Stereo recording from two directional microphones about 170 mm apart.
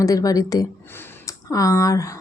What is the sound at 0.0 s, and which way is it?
Speech, 20° left (ahead or behind).